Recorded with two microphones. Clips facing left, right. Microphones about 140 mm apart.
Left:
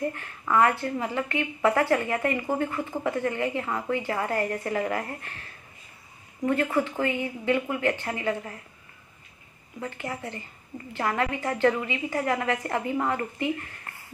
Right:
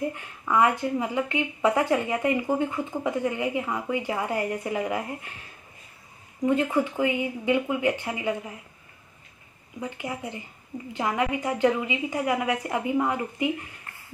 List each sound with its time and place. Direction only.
0.0 s speech: 15° right (ahead or behind)
9.8 s speech: 15° right (ahead or behind)